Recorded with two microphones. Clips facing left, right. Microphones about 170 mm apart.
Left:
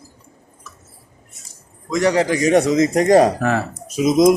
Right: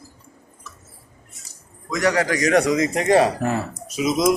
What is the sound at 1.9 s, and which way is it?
Speech, 25° left (ahead or behind).